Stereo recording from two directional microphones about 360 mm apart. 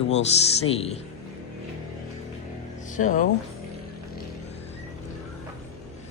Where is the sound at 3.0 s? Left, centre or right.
Left.